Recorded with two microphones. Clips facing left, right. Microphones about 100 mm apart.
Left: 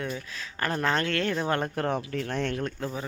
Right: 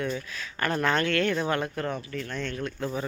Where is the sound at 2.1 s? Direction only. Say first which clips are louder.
Left 4 dB; 70° left (ahead or behind).